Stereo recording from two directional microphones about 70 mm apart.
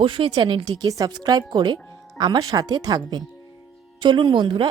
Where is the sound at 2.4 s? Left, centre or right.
Right.